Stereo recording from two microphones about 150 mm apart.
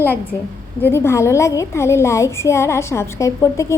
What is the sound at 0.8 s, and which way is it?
A woman's voice, 15° left (ahead or behind).